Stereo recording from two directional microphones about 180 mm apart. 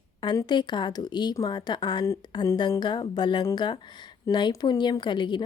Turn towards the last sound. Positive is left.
turn(degrees=25)  # may be behind; listen again after turning